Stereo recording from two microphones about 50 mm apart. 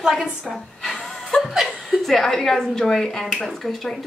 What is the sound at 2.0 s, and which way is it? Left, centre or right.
A woman's voice, centre.